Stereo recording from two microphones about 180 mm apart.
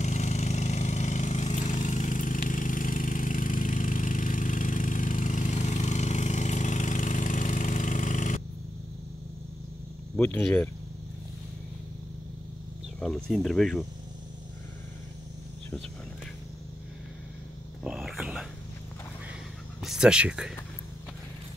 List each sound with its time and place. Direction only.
0.0 s engine: 40° left (ahead or behind)
10.1 s speech: 10° left (ahead or behind)
13.0 s speech: centre (ahead or behind)
17.8 s whispering: centre (ahead or behind)
19.8 s speech: 5° right (ahead or behind)